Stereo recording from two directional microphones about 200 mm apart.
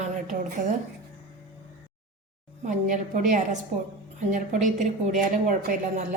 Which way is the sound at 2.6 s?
40° right (ahead or behind).